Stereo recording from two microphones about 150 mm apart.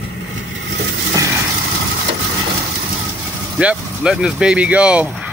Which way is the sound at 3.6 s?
5° right (ahead or behind).